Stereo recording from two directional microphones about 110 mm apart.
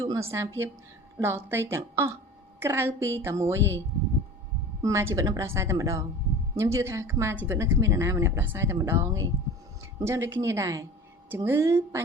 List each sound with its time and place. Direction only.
0.0 s speech: 30° right (ahead or behind)
4.8 s speech: 25° right (ahead or behind)